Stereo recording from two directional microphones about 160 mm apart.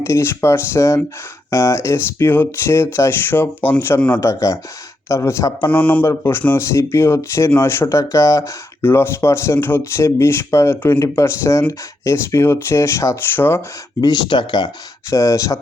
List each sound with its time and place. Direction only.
0.0 s speech: 15° left (ahead or behind)
5.7 s speech: 10° left (ahead or behind)
14.0 s speech: 25° left (ahead or behind)